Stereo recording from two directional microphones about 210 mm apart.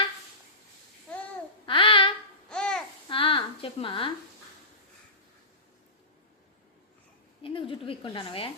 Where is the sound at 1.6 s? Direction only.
25° left (ahead or behind).